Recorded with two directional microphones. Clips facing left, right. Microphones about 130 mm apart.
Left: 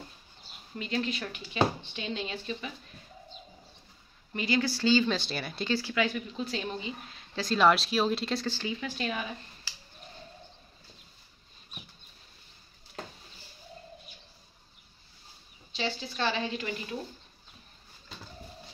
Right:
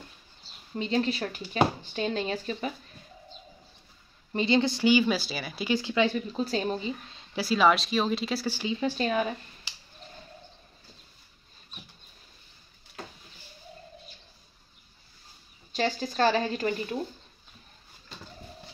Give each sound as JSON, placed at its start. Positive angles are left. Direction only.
{"t": 0.7, "sound": "speech", "side_deg": -30}
{"t": 4.3, "sound": "speech", "side_deg": -25}
{"t": 5.7, "sound": "speech", "side_deg": -20}
{"t": 7.3, "sound": "speech", "side_deg": -5}
{"t": 8.7, "sound": "speech", "side_deg": -35}
{"t": 9.7, "sound": "a sound", "side_deg": -20}
{"t": 15.7, "sound": "speech", "side_deg": -45}